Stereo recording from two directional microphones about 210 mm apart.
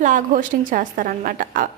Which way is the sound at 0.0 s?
40° right (ahead or behind).